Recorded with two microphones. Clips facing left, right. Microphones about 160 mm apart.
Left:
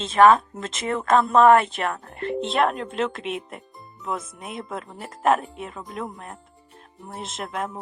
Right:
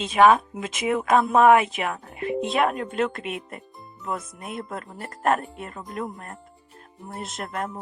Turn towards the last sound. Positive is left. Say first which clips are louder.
# left 1 dB
turn(degrees=0)  # may be behind; listen again after turning